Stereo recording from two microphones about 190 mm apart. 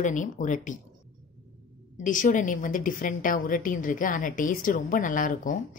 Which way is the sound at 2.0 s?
45° left (ahead or behind).